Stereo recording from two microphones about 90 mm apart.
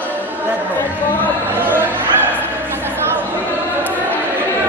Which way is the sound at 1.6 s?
20° right (ahead or behind).